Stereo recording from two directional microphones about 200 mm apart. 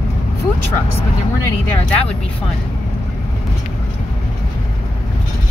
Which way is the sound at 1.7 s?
5° left (ahead or behind).